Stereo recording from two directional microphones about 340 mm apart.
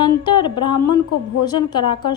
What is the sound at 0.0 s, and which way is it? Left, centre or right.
A woman's voice, centre.